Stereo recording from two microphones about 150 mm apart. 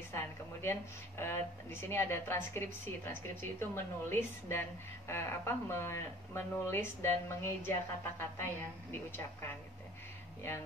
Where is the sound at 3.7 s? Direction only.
15° left (ahead or behind).